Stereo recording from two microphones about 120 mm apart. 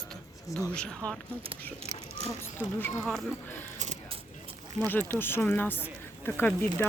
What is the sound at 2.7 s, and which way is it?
Speech, 15° left (ahead or behind).